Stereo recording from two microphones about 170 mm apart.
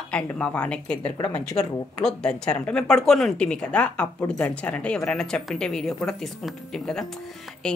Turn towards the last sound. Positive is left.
turn(degrees=0)  # may be behind; listen again after turning